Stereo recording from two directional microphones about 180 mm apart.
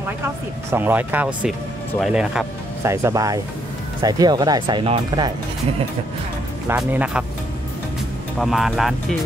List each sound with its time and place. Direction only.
0.7 s speech: 10° right (ahead or behind)
2.8 s speech: 15° right (ahead or behind)
6.7 s speech: 10° right (ahead or behind)
8.4 s speech: centre (ahead or behind)